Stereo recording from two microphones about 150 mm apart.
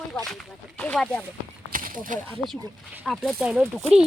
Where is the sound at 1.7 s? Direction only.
65° right (ahead or behind).